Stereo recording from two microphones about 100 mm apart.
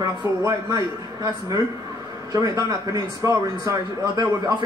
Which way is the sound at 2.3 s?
40° right (ahead or behind).